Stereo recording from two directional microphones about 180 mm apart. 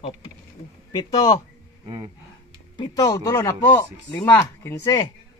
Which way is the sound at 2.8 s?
20° left (ahead or behind).